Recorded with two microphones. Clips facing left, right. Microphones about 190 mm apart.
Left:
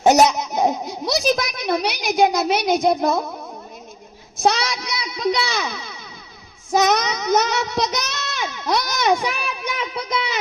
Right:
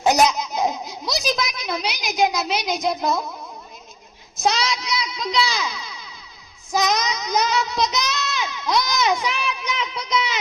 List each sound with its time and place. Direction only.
0.3 s a child's voice: 60° left (ahead or behind)
4.4 s a child's voice: 55° left (ahead or behind)